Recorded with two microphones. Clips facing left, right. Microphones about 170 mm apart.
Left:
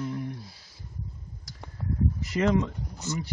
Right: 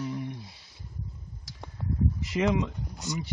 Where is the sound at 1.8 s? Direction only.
Centre (ahead or behind).